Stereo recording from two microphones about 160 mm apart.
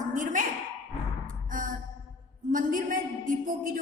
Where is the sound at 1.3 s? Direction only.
55° right (ahead or behind).